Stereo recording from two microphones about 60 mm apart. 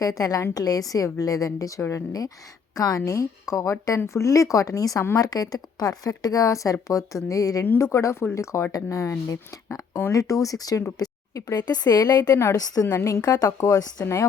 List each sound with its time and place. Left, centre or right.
0.0 s a woman's voice: left
1.9 s speech: left
3.0 s a woman's voice: left
7.8 s speech: left
8.7 s a woman's voice: left
12.5 s a woman's voice: left
13.2 s speech: left
14.0 s speech: left